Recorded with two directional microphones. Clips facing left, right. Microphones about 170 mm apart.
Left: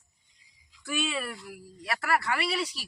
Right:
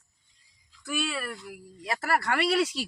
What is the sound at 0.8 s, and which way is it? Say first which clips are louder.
Speech: even; 5° left (ahead or behind).